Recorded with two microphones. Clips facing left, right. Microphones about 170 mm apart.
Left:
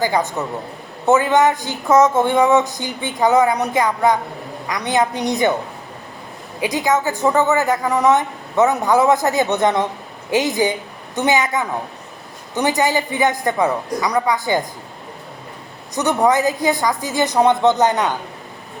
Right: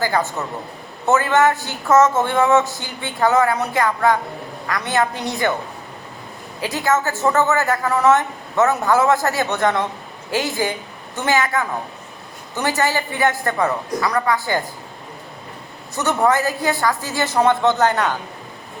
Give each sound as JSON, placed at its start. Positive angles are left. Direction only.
{"t": 0.0, "sound": "speech", "side_deg": 15}
{"t": 6.6, "sound": "speech", "side_deg": 15}
{"t": 16.0, "sound": "speech", "side_deg": 15}